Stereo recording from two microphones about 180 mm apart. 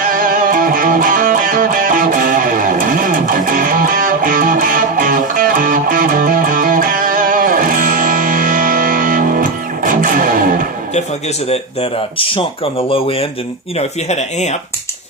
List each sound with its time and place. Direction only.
0.0 s music: 50° right (ahead or behind)
11.4 s speech: 35° left (ahead or behind)